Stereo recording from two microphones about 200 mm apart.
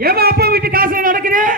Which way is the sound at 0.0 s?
50° right (ahead or behind).